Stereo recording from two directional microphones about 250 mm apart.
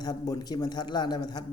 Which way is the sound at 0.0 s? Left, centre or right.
Centre.